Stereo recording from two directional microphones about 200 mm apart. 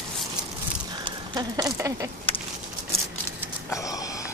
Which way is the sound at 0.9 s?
20° right (ahead or behind).